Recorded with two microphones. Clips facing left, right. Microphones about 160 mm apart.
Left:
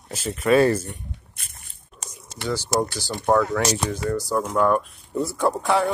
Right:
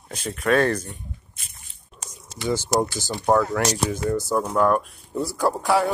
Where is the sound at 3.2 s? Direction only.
5° right (ahead or behind).